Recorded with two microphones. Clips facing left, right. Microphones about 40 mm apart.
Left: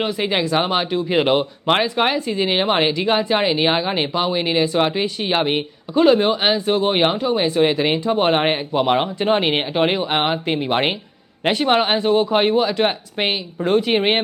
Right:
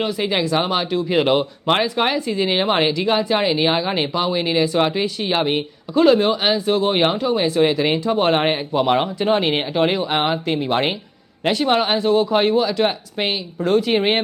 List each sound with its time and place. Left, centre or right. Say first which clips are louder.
0.0 s speech: even; left